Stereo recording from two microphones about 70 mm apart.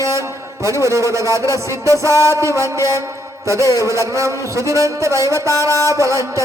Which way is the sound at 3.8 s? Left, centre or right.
Right.